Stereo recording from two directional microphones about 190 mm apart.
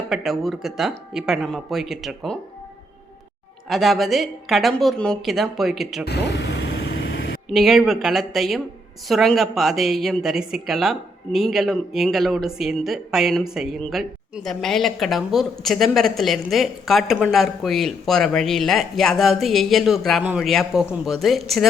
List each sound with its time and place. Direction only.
0.1 s a woman's voice: centre (ahead or behind)
3.7 s a woman's voice: centre (ahead or behind)
6.1 s vehicle: 65° left (ahead or behind)
7.5 s a woman's voice: centre (ahead or behind)